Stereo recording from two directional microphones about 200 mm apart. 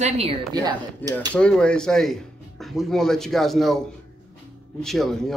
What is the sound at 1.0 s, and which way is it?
Speech, 10° left (ahead or behind).